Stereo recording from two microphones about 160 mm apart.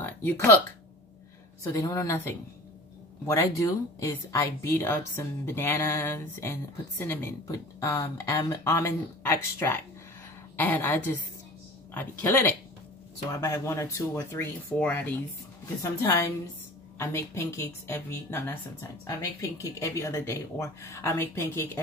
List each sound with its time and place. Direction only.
0.0 s speech: 15° left (ahead or behind)
1.6 s a woman's voice: 20° left (ahead or behind)